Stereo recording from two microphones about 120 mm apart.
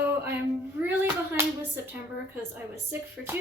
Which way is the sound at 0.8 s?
20° right (ahead or behind).